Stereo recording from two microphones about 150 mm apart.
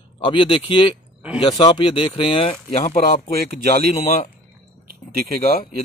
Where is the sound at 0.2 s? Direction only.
35° left (ahead or behind).